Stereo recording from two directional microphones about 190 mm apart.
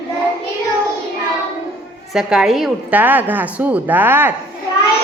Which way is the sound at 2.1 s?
5° right (ahead or behind).